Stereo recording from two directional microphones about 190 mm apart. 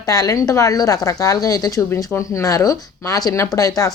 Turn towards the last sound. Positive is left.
turn(degrees=20)  # may be behind; listen again after turning